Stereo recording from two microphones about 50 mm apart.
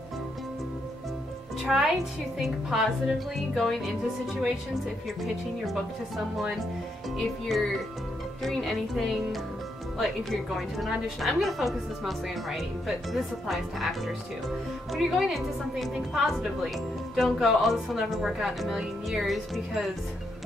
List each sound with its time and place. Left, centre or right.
1.6 s a woman's voice: centre
11.1 s a woman's voice: centre